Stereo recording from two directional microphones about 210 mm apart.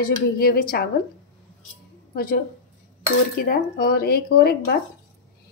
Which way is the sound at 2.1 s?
45° left (ahead or behind).